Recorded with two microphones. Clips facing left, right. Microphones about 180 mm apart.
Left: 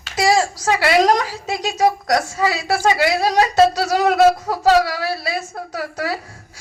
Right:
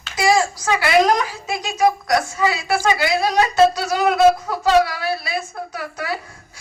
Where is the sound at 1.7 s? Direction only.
35° left (ahead or behind).